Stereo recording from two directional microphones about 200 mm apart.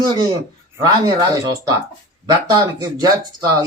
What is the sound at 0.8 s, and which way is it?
Speech, 15° right (ahead or behind).